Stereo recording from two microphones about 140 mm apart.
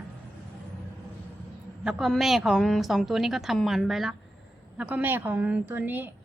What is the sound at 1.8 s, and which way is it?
A woman's voice, centre (ahead or behind).